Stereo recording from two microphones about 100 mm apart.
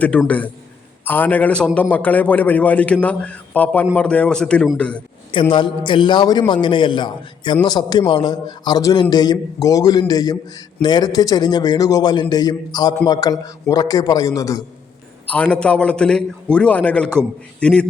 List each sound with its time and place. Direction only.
0.0 s a man's voice: 15° left (ahead or behind)
5.3 s a man's voice: 55° left (ahead or behind); by 14.6 s 35° left (ahead or behind)
15.3 s a man's voice: 10° left (ahead or behind)